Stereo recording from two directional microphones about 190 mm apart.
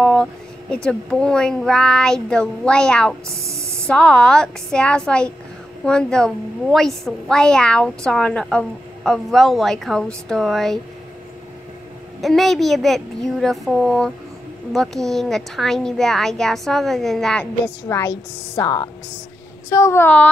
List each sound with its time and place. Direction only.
0.0 s speech: 5° left (ahead or behind)
12.2 s speech: centre (ahead or behind)
17.8 s speech: 15° left (ahead or behind)